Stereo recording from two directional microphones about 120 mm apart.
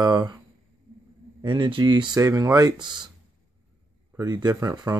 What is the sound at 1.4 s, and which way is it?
Speech, 40° right (ahead or behind).